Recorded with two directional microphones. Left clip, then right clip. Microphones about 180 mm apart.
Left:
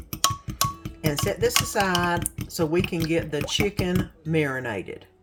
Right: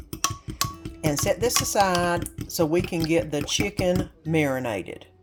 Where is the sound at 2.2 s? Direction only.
5° left (ahead or behind).